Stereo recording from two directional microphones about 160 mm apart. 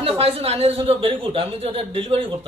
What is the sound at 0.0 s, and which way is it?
Speech, 40° right (ahead or behind).